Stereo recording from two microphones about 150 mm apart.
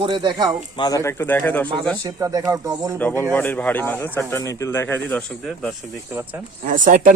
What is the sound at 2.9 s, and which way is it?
Speech, 10° left (ahead or behind).